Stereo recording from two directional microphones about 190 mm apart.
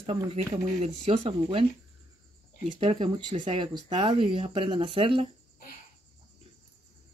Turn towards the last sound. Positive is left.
turn(degrees=-25)  # may be behind; listen again after turning